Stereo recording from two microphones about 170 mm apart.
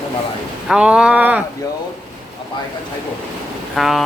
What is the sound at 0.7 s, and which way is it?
Speech, 5° right (ahead or behind).